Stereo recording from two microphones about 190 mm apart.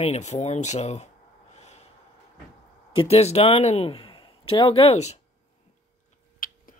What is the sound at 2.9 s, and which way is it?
Speech, 30° left (ahead or behind).